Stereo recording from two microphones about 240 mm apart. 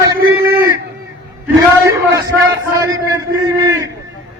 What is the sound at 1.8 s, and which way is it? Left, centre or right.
A man's voice, centre.